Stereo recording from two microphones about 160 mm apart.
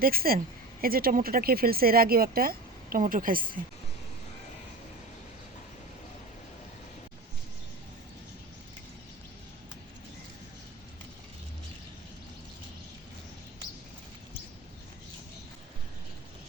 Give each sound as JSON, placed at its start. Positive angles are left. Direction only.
{"t": 0.0, "sound": "speech", "side_deg": -65}